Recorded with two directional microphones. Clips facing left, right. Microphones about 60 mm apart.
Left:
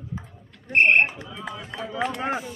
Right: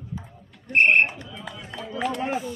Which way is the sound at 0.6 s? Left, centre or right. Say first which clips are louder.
Even; left.